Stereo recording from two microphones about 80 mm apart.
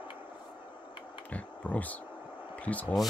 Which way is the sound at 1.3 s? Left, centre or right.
Centre.